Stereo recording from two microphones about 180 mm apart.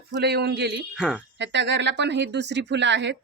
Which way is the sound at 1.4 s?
80° right.